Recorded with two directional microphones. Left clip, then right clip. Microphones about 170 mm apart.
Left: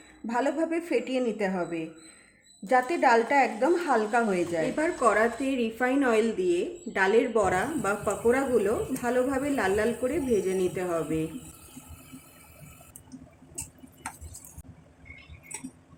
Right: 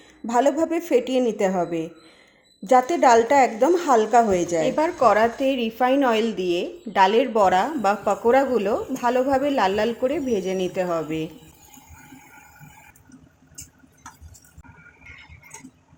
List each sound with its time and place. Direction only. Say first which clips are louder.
0.3 s a woman's voice: right 7 dB; 35° right (ahead or behind)
4.7 s a woman's voice: right 7 dB; 20° right (ahead or behind)